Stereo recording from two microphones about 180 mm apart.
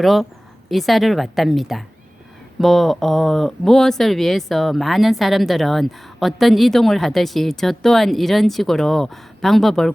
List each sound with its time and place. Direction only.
0.0 s speech: centre (ahead or behind)